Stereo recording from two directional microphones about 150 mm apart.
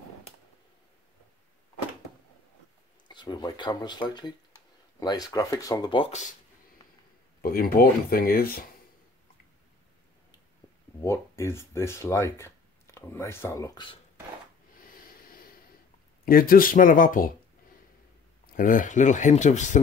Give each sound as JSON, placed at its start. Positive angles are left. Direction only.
{"t": 3.1, "sound": "speech", "side_deg": 30}
{"t": 7.4, "sound": "speech", "side_deg": 80}
{"t": 11.1, "sound": "speech", "side_deg": 20}
{"t": 16.3, "sound": "speech", "side_deg": 75}
{"t": 18.5, "sound": "speech", "side_deg": 65}